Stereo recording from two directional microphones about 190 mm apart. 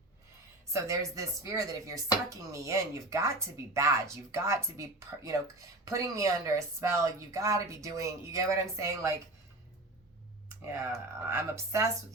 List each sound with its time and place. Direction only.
0.7 s a woman's voice: 15° right (ahead or behind)
10.8 s a woman's voice: 15° right (ahead or behind)